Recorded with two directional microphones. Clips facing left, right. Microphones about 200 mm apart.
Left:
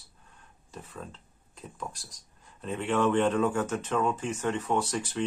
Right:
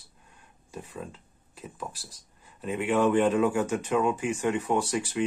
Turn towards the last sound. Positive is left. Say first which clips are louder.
# right 2 dB
turn(degrees=-10)  # may be behind; listen again after turning